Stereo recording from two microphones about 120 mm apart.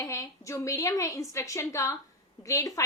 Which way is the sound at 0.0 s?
25° left (ahead or behind).